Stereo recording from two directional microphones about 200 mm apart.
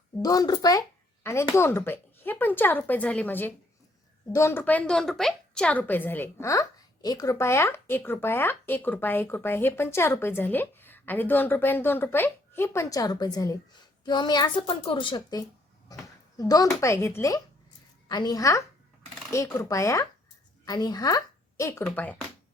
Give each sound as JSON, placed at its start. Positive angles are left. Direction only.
{"t": 0.2, "sound": "a woman's voice", "side_deg": 20}